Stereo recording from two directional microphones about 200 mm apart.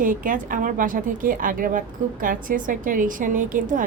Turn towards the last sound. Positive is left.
turn(degrees=-40)  # may be behind; listen again after turning